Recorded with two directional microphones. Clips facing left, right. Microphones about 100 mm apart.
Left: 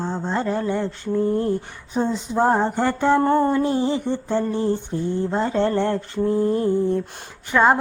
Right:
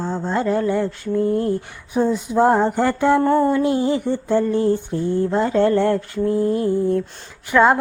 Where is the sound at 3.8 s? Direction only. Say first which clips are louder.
Right 2 dB; 20° left (ahead or behind).